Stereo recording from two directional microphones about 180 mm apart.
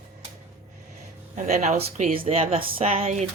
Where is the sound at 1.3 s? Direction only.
40° right (ahead or behind).